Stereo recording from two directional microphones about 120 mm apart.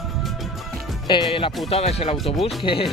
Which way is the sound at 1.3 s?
50° left (ahead or behind).